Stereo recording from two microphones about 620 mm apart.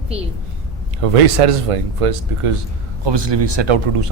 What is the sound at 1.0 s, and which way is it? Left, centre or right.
Speech, right.